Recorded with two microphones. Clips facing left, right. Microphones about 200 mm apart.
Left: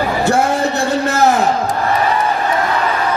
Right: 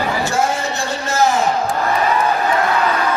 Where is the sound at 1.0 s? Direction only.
65° left (ahead or behind).